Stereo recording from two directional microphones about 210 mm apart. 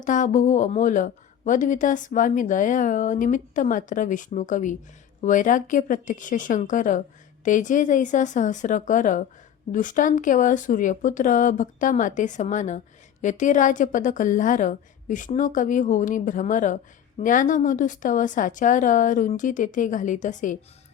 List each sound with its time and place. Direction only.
0.0 s a woman's voice: 35° left (ahead or behind)